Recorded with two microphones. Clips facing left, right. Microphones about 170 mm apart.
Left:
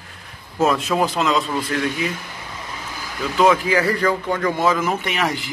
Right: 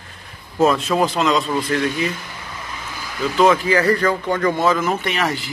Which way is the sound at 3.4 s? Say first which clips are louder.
Right 1 dB; 10° left (ahead or behind).